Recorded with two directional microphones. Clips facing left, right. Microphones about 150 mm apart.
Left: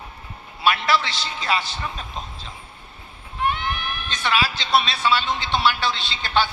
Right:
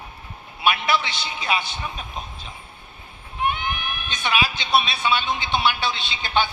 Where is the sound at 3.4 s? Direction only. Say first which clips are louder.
Left 1 dB; 15° right (ahead or behind).